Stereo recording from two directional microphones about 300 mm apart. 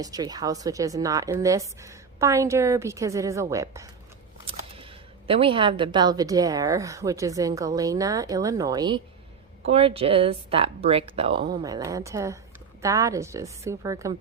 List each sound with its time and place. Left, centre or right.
0.0 s a woman's voice: centre
5.3 s a woman's voice: centre